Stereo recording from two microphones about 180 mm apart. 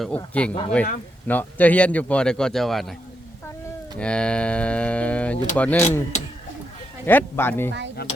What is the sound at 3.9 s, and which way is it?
A man's voice, 5° left (ahead or behind).